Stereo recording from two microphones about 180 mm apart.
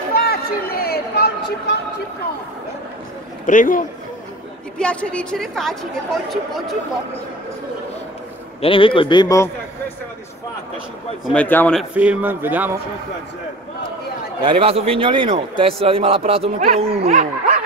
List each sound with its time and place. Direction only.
0.1 s a sound: 55° left (ahead or behind)
3.4 s a man's voice: 45° left (ahead or behind)
4.7 s a woman's voice: 5° left (ahead or behind)
8.5 s a man's voice: 30° left (ahead or behind)
11.2 s a man's voice: 10° left (ahead or behind)
11.9 s speech: 10° right (ahead or behind)
14.4 s a man's voice: 30° right (ahead or behind)